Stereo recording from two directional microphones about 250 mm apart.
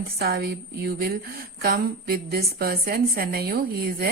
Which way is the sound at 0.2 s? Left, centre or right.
Right.